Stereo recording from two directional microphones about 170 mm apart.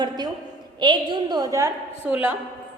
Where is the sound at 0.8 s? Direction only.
25° right (ahead or behind).